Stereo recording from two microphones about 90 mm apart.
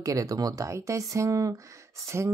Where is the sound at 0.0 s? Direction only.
40° right (ahead or behind).